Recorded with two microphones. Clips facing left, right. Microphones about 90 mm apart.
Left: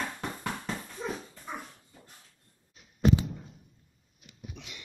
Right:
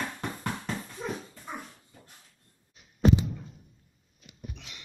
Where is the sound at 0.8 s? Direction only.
Centre (ahead or behind).